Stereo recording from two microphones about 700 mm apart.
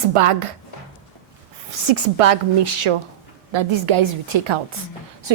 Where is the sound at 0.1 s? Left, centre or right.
Right.